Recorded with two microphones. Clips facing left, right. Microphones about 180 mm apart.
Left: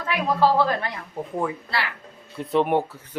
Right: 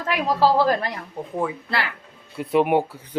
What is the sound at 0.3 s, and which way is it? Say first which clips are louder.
Speech: right 2 dB; 35° right (ahead or behind).